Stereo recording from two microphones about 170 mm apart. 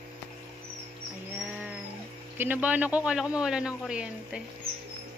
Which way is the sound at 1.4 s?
10° right (ahead or behind).